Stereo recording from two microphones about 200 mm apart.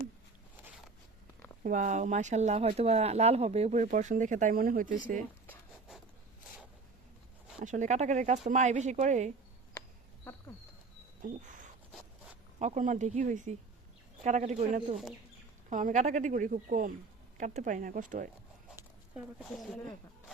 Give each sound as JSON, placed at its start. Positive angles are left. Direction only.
{"t": 1.6, "sound": "speech", "side_deg": -40}
{"t": 7.6, "sound": "speech", "side_deg": -40}
{"t": 11.2, "sound": "speech", "side_deg": -40}
{"t": 18.8, "sound": "speech", "side_deg": -5}